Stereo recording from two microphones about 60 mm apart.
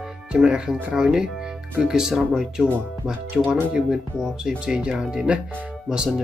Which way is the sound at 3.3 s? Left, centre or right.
Right.